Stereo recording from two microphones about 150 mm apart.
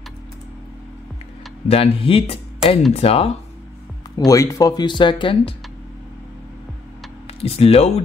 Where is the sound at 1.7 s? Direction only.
40° left (ahead or behind).